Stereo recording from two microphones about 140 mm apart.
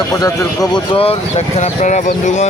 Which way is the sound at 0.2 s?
25° left (ahead or behind).